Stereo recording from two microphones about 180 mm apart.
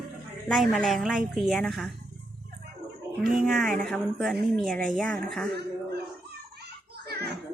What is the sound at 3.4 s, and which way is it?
Speech, centre (ahead or behind).